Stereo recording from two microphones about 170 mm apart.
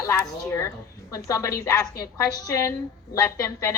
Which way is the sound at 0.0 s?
15° left (ahead or behind).